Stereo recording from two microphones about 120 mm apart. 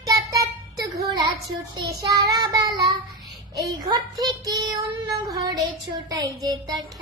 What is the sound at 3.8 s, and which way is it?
Child singing, 35° right (ahead or behind).